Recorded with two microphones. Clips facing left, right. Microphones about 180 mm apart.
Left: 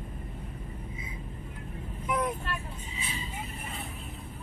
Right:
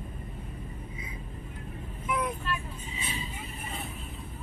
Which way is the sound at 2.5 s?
55° left (ahead or behind).